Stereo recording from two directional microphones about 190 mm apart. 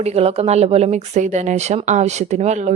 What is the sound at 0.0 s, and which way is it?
Speech, 35° right (ahead or behind).